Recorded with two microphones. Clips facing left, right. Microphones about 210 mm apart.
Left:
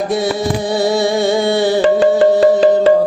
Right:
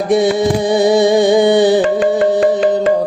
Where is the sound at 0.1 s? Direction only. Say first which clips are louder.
Right 4 dB; 20° right (ahead or behind).